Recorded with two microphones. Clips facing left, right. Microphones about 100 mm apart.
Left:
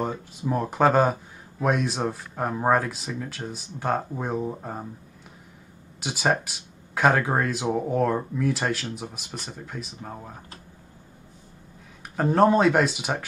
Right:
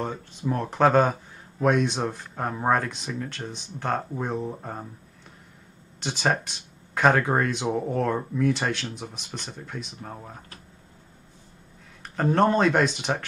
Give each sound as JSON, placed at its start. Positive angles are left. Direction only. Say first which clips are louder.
{"t": 0.0, "sound": "speech", "louder": "left 1 dB", "side_deg": 10}
{"t": 5.9, "sound": "speech", "louder": "left 1 dB", "side_deg": 5}
{"t": 12.2, "sound": "speech", "louder": "left 2 dB", "side_deg": 5}